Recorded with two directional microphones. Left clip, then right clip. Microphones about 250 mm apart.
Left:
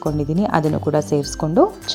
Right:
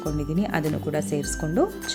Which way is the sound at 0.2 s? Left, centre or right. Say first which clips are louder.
Left 9 dB; centre.